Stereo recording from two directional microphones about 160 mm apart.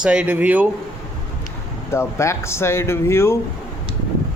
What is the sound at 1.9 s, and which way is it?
Speech, 15° left (ahead or behind).